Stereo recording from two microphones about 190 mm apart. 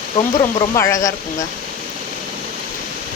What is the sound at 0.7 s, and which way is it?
Speech, 15° left (ahead or behind).